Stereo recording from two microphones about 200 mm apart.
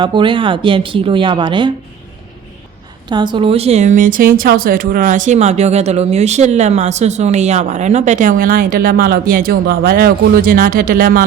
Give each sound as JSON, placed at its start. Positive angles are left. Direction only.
{"t": 0.0, "sound": "speech", "side_deg": -25}
{"t": 3.1, "sound": "speech", "side_deg": -25}